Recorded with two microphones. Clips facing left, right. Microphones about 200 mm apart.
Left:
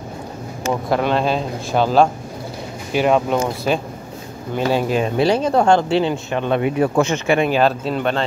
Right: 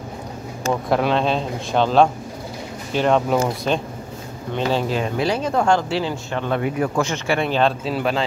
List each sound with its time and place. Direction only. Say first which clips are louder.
0.8 s speech: left 1 dB; centre (ahead or behind)
5.1 s speech: left 6 dB; 30° left (ahead or behind); by 7.7 s 10° left (ahead or behind)
7.8 s speech: left 1 dB; 5° right (ahead or behind)